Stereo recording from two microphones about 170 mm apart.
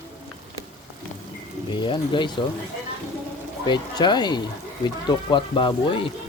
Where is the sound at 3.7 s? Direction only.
25° left (ahead or behind).